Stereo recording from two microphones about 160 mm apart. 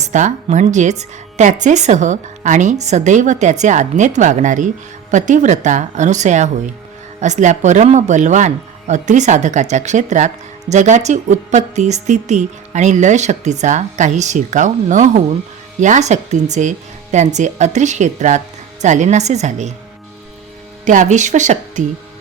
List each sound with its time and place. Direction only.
0.0 s speech: 45° right (ahead or behind)
20.8 s speech: 50° right (ahead or behind)